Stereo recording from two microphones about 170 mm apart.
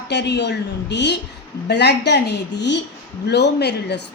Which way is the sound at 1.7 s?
80° left.